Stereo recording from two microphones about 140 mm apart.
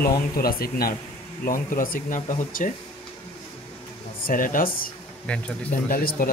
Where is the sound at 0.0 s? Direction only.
90° left; by 2.7 s 70° left (ahead or behind).